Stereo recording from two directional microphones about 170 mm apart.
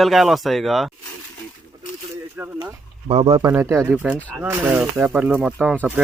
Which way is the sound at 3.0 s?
40° right (ahead or behind).